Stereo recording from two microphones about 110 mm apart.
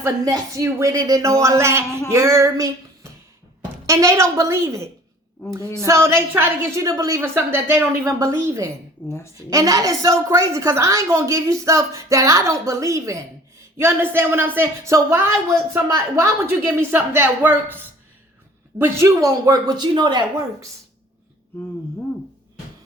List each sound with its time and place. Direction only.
0.3 s a woman's voice: 30° right (ahead or behind)
2.0 s a sound: 25° right (ahead or behind)
3.8 s a woman's voice: 30° right (ahead or behind)
7.2 s a woman's voice: 20° right (ahead or behind)
9.0 s a woman's voice: 25° left (ahead or behind)
9.5 s a woman's voice: 30° right (ahead or behind)
18.8 s speech: 25° right (ahead or behind); by 20.2 s 45° right (ahead or behind)